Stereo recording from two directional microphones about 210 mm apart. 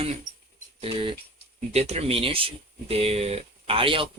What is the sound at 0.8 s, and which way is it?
Speech, 25° right (ahead or behind).